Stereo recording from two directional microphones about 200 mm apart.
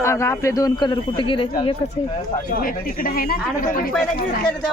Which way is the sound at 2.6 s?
45° left (ahead or behind).